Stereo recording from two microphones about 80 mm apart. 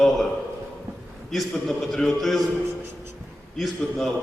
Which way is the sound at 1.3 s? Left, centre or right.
Centre.